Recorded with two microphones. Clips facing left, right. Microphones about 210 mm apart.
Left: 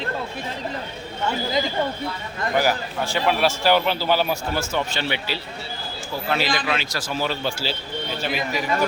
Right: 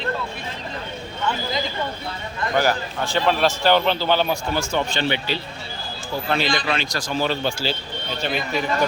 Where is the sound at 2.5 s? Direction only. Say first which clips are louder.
Right 1 dB; 10° left (ahead or behind).